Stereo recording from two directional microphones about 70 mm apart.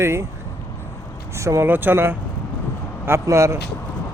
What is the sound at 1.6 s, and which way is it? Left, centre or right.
Speech, right.